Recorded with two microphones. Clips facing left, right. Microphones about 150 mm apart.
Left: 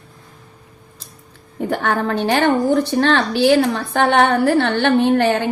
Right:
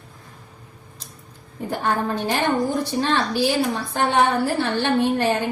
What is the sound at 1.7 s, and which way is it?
A woman's voice, 75° left (ahead or behind).